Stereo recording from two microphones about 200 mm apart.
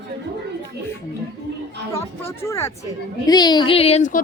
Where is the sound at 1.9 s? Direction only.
15° left (ahead or behind).